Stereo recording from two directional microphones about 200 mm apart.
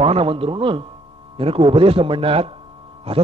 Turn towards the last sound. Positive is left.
turn(degrees=-30)  # may be behind; listen again after turning